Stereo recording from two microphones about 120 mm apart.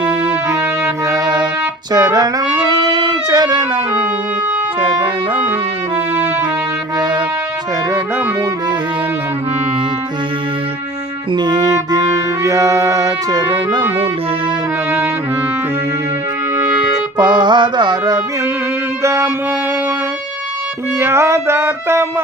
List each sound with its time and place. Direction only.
0.4 s music: 25° right (ahead or behind)
4.8 s clarinet: 40° right (ahead or behind)
11.3 s music: 35° right (ahead or behind)
17.2 s music: 35° right (ahead or behind)
19.0 s music: 25° right (ahead or behind)
21.0 s music: 20° right (ahead or behind)